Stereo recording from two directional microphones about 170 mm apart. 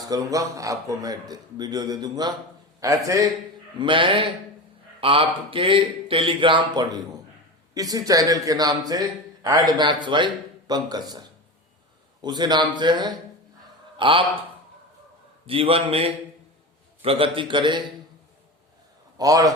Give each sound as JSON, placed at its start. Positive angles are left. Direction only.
{"t": 0.0, "sound": "a man's voice", "side_deg": -20}
{"t": 3.8, "sound": "a man's voice", "side_deg": -30}
{"t": 15.4, "sound": "a man's voice", "side_deg": -35}
{"t": 19.1, "sound": "a man's voice", "side_deg": -20}